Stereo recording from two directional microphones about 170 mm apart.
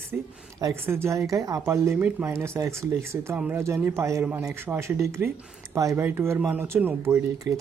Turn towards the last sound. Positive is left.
turn(degrees=-15)  # may be behind; listen again after turning